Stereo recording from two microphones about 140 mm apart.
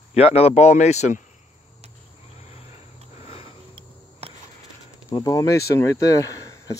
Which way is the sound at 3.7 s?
45° right (ahead or behind).